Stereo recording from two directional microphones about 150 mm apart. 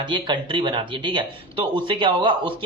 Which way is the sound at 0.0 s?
30° right (ahead or behind).